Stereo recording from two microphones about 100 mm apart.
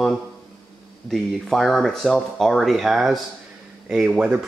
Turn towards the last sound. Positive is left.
turn(degrees=-10)  # may be behind; listen again after turning